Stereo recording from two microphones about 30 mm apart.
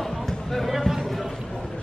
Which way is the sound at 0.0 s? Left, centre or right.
Centre.